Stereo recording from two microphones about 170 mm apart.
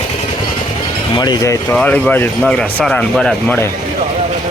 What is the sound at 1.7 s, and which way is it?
Speech, 5° left (ahead or behind).